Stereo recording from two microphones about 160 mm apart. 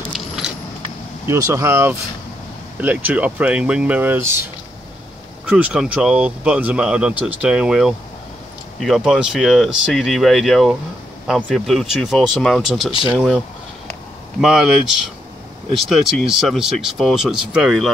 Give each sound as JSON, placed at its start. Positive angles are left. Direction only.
{"t": 1.2, "sound": "speech", "side_deg": -20}
{"t": 14.4, "sound": "speech", "side_deg": 0}